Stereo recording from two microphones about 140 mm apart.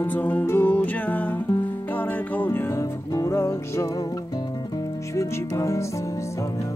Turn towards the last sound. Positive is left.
turn(degrees=20)  # may be behind; listen again after turning